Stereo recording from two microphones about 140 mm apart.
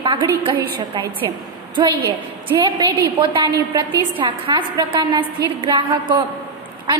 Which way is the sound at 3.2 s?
30° right (ahead or behind).